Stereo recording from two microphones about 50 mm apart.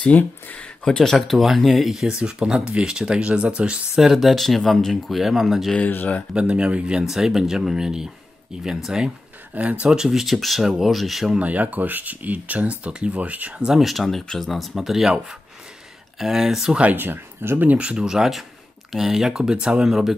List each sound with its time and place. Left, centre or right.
0.0 s speech: left
0.8 s speech: centre
1.1 s speech: centre; by 3.8 s right
3.9 s speech: centre
5.9 s speech: left
6.3 s speech: right
9.5 s speech: right
10.0 s speech: centre
11.3 s speech: right
13.6 s speech: centre
13.8 s speech: centre
16.2 s speech: centre
16.9 s speech: right
17.7 s speech: centre